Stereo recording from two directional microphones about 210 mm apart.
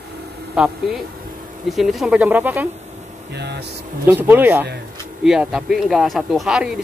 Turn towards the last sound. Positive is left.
turn(degrees=0)  # may be behind; listen again after turning